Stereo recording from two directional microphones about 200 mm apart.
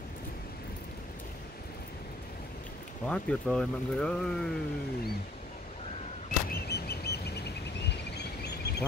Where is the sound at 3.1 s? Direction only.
5° left (ahead or behind).